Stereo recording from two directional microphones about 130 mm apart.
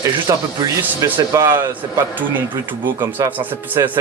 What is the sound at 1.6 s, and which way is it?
A man's voice, 15° right (ahead or behind).